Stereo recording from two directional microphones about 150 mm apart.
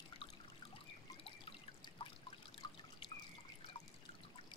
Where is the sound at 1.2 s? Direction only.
35° left (ahead or behind).